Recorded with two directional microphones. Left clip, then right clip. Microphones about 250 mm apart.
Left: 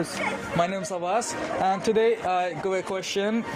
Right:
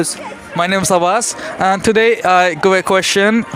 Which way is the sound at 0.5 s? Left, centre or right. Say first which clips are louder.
Right 16 dB; right.